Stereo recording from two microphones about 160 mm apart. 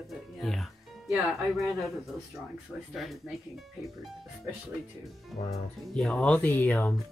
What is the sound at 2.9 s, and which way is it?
Speech, centre (ahead or behind).